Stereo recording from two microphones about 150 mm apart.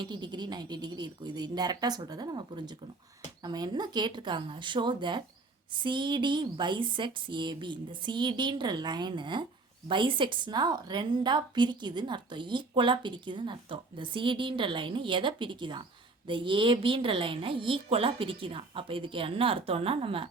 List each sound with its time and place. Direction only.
0.0 s a woman's voice: 30° right (ahead or behind)